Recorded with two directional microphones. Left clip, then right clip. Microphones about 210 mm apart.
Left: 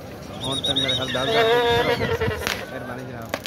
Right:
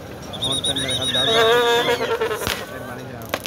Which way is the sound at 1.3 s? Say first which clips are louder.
Right 2 dB; 40° right (ahead or behind).